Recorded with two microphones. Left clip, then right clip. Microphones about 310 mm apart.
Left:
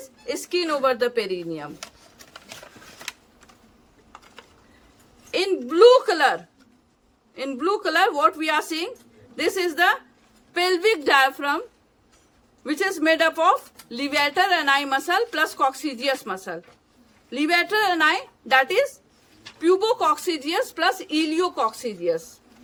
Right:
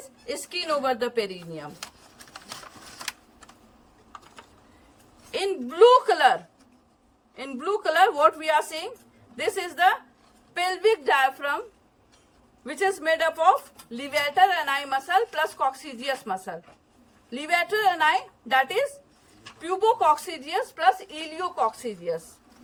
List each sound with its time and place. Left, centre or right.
0.3 s a woman's voice: centre
5.3 s a woman's voice: centre
12.6 s a woman's voice: centre
19.6 s a woman's voice: centre